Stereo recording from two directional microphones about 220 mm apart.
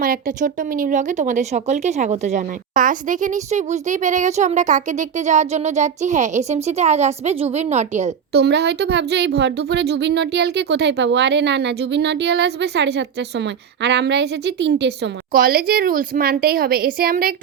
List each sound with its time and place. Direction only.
0.0 s speech: 40° right (ahead or behind)
8.3 s speech: 50° right (ahead or behind)